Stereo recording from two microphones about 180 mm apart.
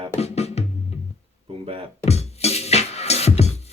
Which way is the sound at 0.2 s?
35° left (ahead or behind).